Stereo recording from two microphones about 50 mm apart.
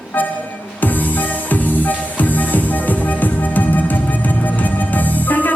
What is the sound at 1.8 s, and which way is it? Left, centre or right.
Music, left.